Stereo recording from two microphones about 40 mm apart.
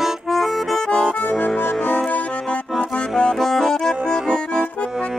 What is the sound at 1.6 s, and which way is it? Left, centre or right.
Music, left.